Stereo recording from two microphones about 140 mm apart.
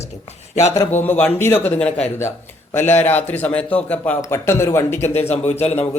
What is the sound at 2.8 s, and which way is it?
Speech, 15° left (ahead or behind).